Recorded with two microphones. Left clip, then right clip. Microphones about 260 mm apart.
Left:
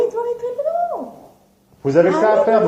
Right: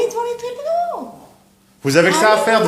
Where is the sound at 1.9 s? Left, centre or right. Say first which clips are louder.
Right 1 dB; right.